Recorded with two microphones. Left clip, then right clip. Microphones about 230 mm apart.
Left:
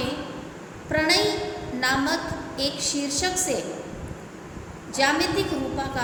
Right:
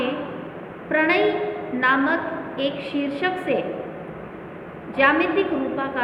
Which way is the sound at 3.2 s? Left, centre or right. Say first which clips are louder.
Right 4 dB; centre.